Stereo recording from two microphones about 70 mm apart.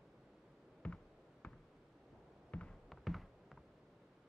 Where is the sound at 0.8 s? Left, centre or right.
Centre.